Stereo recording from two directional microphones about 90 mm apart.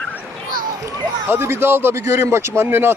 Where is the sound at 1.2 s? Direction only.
25° right (ahead or behind).